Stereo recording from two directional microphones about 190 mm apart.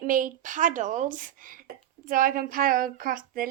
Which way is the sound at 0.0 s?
45° right (ahead or behind).